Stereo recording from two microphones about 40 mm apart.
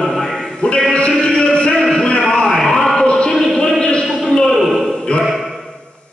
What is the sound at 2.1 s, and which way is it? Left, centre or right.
Music, centre.